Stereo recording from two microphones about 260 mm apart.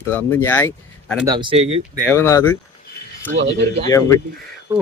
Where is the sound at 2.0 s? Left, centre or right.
Centre.